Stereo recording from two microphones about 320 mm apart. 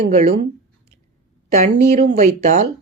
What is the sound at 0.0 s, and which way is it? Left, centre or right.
Speech, right.